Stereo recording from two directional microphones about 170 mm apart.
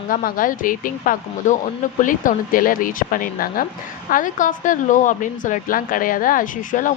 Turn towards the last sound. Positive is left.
turn(degrees=50)  # may be behind; listen again after turning